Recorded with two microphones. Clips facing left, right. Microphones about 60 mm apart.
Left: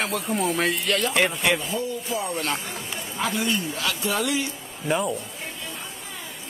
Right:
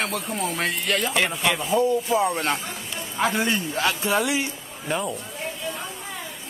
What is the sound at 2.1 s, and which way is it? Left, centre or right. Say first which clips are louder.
A man's voice: right 5 dB; right.